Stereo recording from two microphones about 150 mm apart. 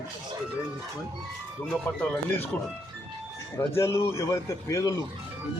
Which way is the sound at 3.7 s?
15° left (ahead or behind).